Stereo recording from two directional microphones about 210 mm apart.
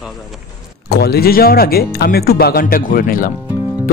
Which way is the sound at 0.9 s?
50° left (ahead or behind).